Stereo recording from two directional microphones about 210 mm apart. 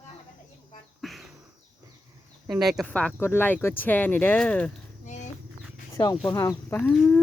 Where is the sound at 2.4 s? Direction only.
Centre (ahead or behind).